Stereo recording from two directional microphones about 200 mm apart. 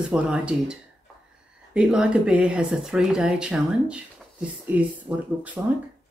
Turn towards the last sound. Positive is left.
turn(degrees=-5)  # may be behind; listen again after turning